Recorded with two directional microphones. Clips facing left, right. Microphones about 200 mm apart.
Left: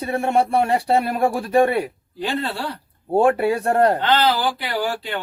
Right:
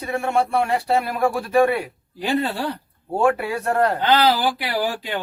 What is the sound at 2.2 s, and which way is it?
Speech, 15° right (ahead or behind).